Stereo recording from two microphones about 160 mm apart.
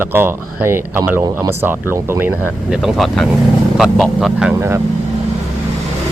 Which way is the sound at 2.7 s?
5° right (ahead or behind).